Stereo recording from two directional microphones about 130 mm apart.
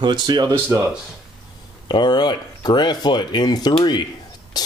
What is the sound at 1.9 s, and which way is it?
Speech, 35° left (ahead or behind).